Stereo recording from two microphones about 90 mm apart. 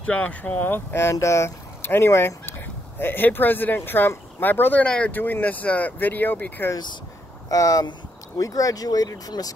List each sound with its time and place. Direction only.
0.0 s speech: 15° left (ahead or behind)
4.8 s speech: 10° left (ahead or behind)
5.1 s speech: 20° left (ahead or behind)
7.4 s speech: 40° left (ahead or behind)